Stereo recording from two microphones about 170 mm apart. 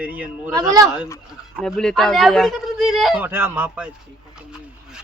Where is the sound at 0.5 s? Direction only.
20° right (ahead or behind).